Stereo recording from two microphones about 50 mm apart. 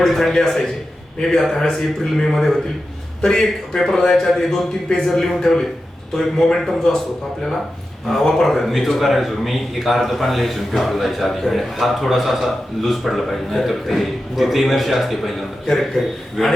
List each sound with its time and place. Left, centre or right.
0.0 s a man's voice: centre
8.1 s a man's voice: centre